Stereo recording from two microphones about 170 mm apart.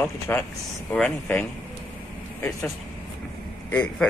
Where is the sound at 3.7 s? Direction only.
10° left (ahead or behind).